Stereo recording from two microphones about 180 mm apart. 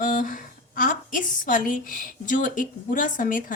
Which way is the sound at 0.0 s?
50° left (ahead or behind).